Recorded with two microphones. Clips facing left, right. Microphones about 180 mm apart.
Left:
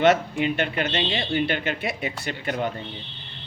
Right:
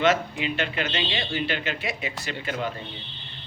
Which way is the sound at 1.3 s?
55° left (ahead or behind).